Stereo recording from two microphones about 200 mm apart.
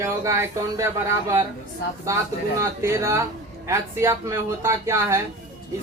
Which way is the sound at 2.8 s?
15° right (ahead or behind).